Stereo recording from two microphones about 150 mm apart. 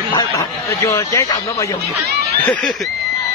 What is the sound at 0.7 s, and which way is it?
Speech, 20° left (ahead or behind).